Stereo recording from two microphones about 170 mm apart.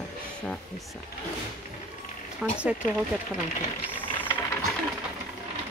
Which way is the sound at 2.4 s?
5° right (ahead or behind).